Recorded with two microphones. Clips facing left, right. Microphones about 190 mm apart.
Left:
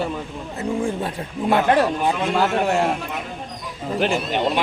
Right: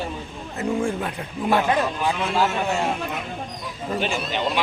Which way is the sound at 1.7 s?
65° left (ahead or behind).